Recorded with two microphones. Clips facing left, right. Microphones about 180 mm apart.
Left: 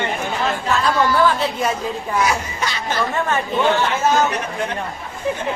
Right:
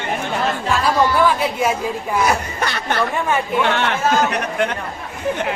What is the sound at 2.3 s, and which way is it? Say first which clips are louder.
A man's voice: right 2 dB; 60° right (ahead or behind).